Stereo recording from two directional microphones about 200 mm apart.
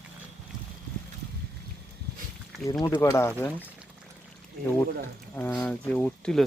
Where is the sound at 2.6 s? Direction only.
15° left (ahead or behind).